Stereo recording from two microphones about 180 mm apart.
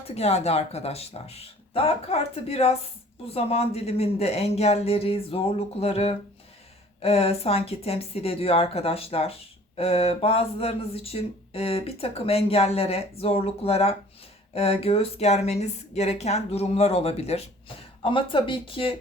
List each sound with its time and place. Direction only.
0.1 s speech: 35° left (ahead or behind)